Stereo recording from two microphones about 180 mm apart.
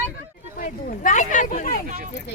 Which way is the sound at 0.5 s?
50° left (ahead or behind).